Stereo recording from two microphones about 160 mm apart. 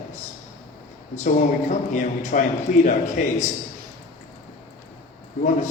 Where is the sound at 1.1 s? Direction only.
50° left (ahead or behind).